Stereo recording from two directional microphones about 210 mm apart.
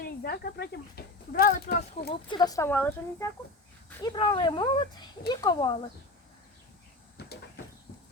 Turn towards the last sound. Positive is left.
turn(degrees=50)  # may be behind; listen again after turning